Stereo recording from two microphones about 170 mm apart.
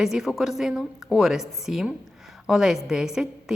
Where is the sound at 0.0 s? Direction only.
5° right (ahead or behind).